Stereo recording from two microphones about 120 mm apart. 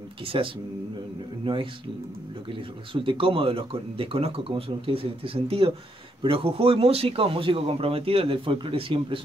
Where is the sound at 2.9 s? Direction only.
45° right (ahead or behind).